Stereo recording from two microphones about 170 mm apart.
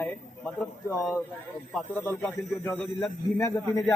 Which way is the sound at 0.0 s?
5° left (ahead or behind).